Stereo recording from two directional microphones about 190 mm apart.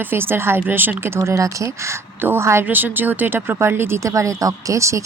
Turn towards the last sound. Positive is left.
turn(degrees=-15)  # may be behind; listen again after turning